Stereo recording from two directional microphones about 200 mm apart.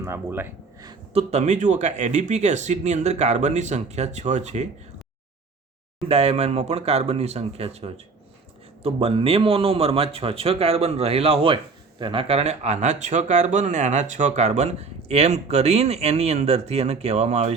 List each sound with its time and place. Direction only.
0.0 s speech: 10° right (ahead or behind)
1.1 s a man's voice: 35° right (ahead or behind)
6.1 s a man's voice: 30° right (ahead or behind)